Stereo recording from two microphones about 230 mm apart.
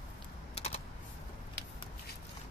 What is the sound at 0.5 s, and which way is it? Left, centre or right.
Typing, left.